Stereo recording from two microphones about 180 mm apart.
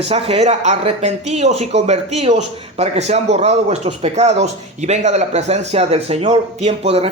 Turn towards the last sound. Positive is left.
turn(degrees=-35)  # may be behind; listen again after turning